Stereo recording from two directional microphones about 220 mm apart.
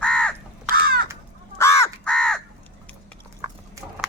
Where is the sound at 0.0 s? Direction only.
5° left (ahead or behind).